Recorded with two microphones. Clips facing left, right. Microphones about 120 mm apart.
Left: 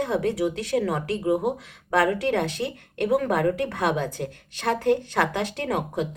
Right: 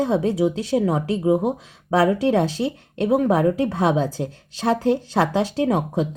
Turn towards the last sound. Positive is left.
turn(degrees=-25)  # may be behind; listen again after turning